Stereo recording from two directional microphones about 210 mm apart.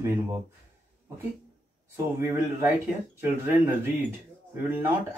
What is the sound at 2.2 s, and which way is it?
Speech, 10° right (ahead or behind).